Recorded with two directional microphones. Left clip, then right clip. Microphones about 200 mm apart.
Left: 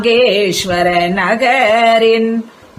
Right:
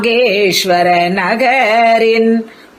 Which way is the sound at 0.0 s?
25° right (ahead or behind).